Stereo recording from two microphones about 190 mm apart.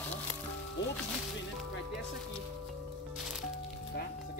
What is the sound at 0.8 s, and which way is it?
Speech, 70° left (ahead or behind).